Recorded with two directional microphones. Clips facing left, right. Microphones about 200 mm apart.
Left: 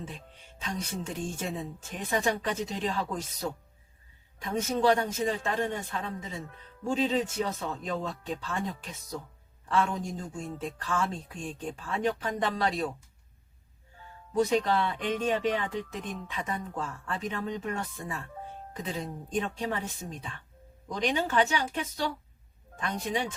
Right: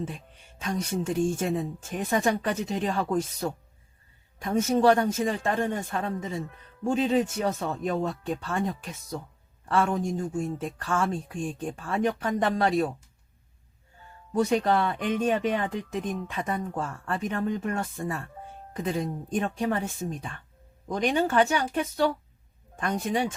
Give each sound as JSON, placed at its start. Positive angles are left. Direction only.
{"t": 0.6, "sound": "speech", "side_deg": -50}
{"t": 14.5, "sound": "speech", "side_deg": -50}
{"t": 20.8, "sound": "speech", "side_deg": -50}